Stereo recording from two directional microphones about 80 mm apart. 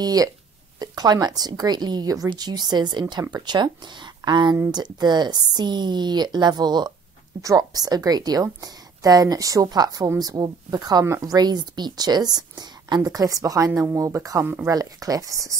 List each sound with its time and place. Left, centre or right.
0.0 s a woman's voice: right
7.4 s a woman's voice: right
14.4 s speech: right
14.7 s a woman's voice: right